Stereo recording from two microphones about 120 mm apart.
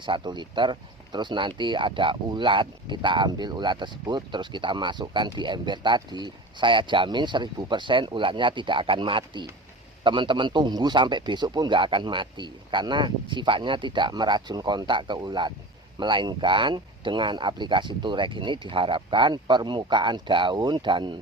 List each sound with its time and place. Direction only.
0.0 s speech: 40° right (ahead or behind)